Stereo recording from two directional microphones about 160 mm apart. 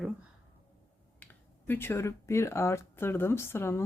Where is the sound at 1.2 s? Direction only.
10° left (ahead or behind).